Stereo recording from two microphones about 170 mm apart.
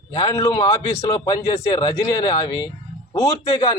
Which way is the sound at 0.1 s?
20° left (ahead or behind).